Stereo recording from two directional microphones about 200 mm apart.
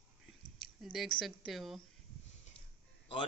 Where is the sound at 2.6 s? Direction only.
30° left (ahead or behind).